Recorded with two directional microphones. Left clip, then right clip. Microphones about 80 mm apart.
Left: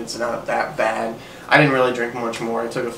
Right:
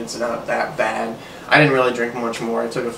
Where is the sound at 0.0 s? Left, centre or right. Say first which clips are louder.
Right 1 dB; centre.